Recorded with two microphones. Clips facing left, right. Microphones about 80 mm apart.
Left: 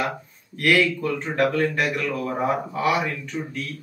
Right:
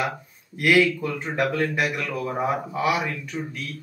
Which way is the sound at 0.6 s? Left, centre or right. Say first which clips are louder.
Right 1 dB; centre.